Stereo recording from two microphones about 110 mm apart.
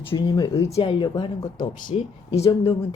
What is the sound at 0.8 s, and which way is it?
Speech, 50° left (ahead or behind).